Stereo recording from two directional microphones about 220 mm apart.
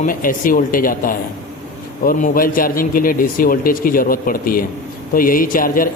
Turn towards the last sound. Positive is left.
turn(degrees=40)  # may be behind; listen again after turning